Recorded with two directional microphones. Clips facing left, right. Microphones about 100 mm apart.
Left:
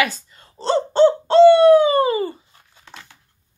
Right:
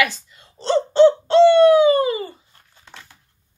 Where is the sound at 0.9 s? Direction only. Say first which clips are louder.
Right 1 dB; 40° left (ahead or behind).